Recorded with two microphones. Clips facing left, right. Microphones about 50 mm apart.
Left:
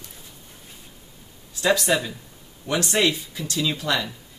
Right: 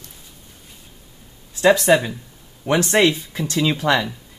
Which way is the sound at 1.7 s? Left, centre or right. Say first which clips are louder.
Right 6 dB; right.